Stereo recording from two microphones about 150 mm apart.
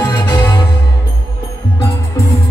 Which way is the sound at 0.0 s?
25° left (ahead or behind).